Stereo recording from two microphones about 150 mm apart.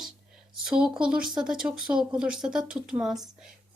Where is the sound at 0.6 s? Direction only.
5° right (ahead or behind).